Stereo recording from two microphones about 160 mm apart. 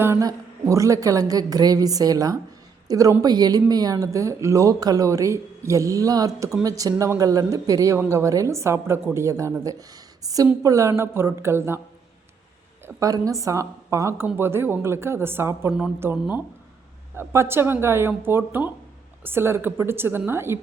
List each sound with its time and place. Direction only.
0.0 s speech: 20° right (ahead or behind)
12.8 s speech: 20° right (ahead or behind)